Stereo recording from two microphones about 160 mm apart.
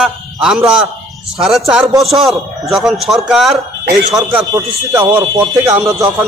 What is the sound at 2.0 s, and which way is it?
A man's voice, centre (ahead or behind).